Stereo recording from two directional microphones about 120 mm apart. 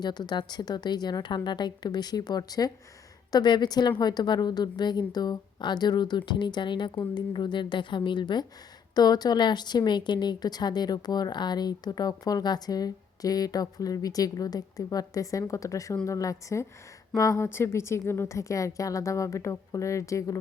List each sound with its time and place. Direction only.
0.0 s a woman's voice: 35° left (ahead or behind)